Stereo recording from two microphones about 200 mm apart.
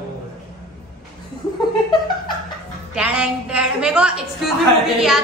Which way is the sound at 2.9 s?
5° right (ahead or behind).